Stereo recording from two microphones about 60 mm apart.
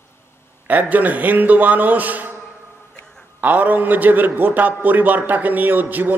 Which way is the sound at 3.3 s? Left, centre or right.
Right.